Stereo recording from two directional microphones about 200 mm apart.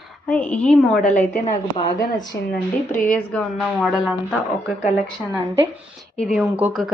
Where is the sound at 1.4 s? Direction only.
25° left (ahead or behind).